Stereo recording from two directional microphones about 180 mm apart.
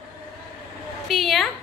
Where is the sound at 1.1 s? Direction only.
Centre (ahead or behind).